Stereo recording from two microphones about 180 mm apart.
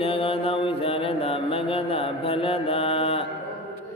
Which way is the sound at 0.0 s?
30° left (ahead or behind).